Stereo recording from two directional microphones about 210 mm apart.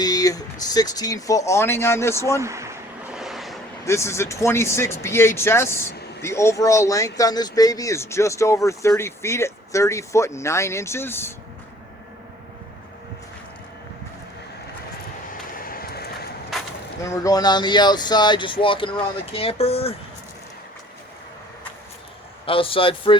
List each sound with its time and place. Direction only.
0.0 s speech: 15° left (ahead or behind)
2.4 s a sound: 15° right (ahead or behind)
3.2 s vehicle: centre (ahead or behind)
3.8 s speech: 15° left (ahead or behind)
15.3 s vehicle: 45° left (ahead or behind)
17.0 s speech: 15° left (ahead or behind)
22.4 s speech: 25° left (ahead or behind)